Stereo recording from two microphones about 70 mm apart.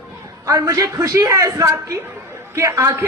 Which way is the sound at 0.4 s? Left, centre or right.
Right.